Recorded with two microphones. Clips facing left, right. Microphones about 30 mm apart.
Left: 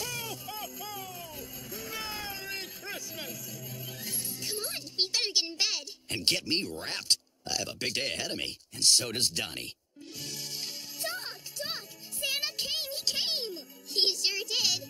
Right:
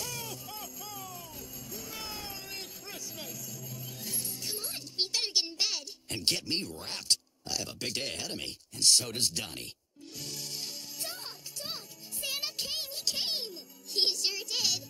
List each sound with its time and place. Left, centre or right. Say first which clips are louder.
0.0 s music: left 3 dB; left
6.5 s speech: left 3 dB; centre
10.3 s music: left 1 dB; left